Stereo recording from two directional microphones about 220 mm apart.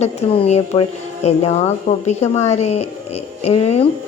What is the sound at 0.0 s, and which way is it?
Speech, 30° left (ahead or behind).